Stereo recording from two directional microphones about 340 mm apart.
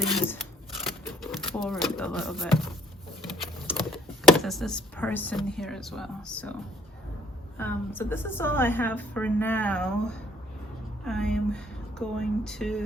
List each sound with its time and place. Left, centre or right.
0.1 s a woman's voice: centre
0.9 s a sound: centre
3.7 s speech: centre
7.6 s a woman's voice: centre